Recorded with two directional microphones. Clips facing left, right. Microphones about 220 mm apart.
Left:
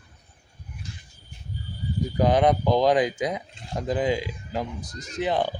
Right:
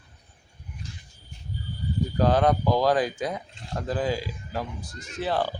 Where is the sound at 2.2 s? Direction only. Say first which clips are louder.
Left 2 dB; 20° left (ahead or behind).